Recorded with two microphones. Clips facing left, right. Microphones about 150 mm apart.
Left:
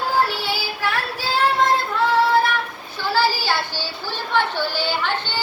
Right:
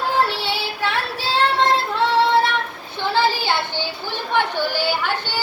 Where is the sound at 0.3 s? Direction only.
25° right (ahead or behind).